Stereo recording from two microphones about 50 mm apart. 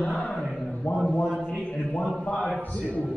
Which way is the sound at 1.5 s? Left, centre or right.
Left.